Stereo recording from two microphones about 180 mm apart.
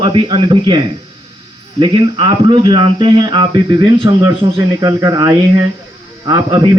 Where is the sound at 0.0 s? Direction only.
25° right (ahead or behind).